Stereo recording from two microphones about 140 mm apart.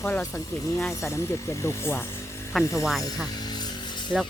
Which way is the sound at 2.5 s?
Centre (ahead or behind).